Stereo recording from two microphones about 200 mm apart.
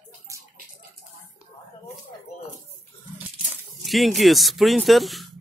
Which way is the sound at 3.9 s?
Centre (ahead or behind).